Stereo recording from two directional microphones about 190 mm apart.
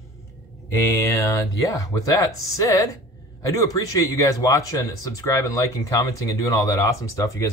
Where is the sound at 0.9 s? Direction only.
15° left (ahead or behind).